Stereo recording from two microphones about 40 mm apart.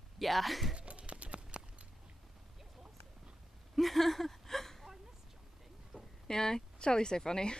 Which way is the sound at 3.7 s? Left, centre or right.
Centre.